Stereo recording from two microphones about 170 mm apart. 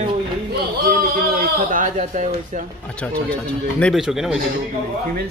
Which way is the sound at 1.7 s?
50° right (ahead or behind).